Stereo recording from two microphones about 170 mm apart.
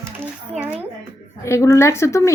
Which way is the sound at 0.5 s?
10° right (ahead or behind).